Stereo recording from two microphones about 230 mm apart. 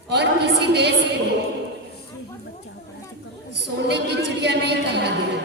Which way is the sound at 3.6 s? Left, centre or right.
Right.